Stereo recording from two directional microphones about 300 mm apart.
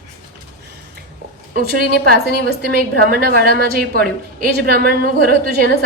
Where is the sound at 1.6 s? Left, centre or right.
Right.